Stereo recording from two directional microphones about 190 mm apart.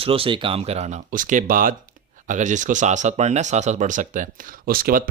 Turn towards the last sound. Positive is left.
turn(degrees=-50)  # may be behind; listen again after turning